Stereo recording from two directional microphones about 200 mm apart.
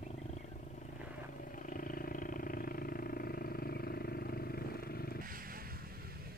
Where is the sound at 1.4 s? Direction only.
40° left (ahead or behind).